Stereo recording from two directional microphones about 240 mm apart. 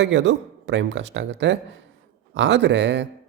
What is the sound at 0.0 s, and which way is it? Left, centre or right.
Speech, right.